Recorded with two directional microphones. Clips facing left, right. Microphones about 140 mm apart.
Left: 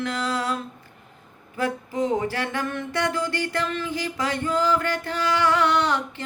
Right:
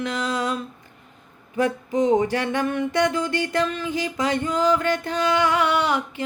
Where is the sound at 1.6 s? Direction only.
20° right (ahead or behind).